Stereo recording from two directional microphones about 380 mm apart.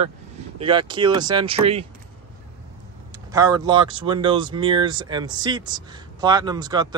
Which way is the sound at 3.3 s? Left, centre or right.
Centre.